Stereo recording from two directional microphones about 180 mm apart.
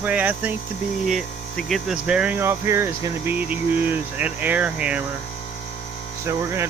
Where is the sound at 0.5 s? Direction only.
40° left (ahead or behind).